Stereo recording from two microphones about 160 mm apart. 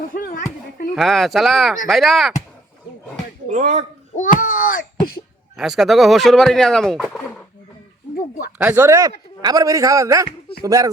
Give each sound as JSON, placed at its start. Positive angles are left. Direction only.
{"t": 0.1, "sound": "a sound", "side_deg": 60}
{"t": 0.9, "sound": "speech", "side_deg": 0}
{"t": 3.5, "sound": "speech", "side_deg": -50}
{"t": 4.1, "sound": "a child's voice", "side_deg": 55}
{"t": 5.5, "sound": "speech", "side_deg": 0}
{"t": 8.5, "sound": "a man's voice", "side_deg": -10}